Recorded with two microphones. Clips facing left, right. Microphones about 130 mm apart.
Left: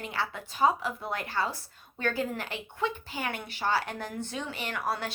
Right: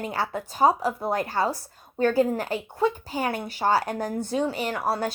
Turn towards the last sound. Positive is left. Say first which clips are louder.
# right 6 dB
turn(degrees=-35)  # may be behind; listen again after turning